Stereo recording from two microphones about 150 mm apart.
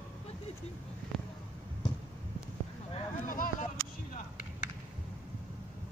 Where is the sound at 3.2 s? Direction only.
70° left (ahead or behind).